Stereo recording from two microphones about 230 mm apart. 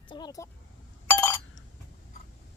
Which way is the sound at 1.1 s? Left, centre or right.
Centre.